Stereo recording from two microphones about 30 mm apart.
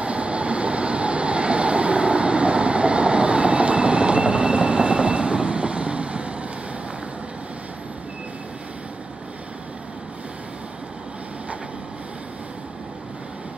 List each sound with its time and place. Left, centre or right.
0.0 s vehicle: right